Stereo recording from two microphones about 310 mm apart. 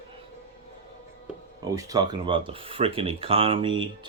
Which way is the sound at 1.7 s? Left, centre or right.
Centre.